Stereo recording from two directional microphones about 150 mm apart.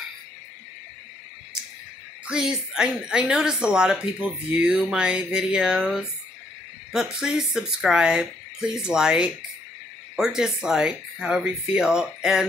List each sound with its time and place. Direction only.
2.2 s a woman's voice: 5° right (ahead or behind)